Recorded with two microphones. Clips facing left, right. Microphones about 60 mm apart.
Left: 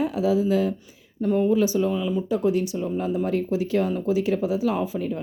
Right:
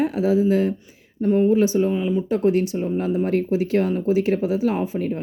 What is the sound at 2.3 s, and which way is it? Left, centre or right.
Speech, right.